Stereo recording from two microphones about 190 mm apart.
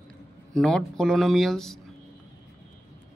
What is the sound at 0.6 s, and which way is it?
Speech, 5° left (ahead or behind).